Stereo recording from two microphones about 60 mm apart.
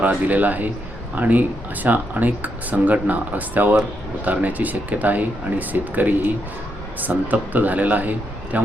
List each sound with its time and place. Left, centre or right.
0.0 s speech: right